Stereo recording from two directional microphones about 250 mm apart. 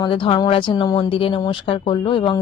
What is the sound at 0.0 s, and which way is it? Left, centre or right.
Speech, centre.